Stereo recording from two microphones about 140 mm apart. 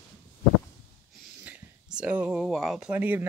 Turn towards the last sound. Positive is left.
turn(degrees=-10)  # may be behind; listen again after turning